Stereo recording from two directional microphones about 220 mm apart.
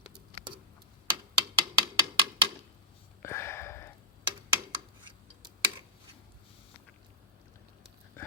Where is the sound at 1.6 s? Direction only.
20° right (ahead or behind).